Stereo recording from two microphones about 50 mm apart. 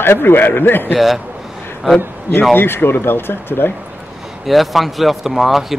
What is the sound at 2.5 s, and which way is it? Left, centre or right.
Speech, left.